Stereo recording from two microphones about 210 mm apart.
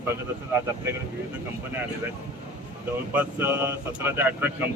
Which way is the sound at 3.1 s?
10° right (ahead or behind).